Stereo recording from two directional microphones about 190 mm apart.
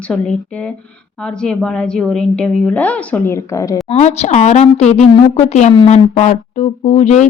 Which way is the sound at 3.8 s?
35° left (ahead or behind).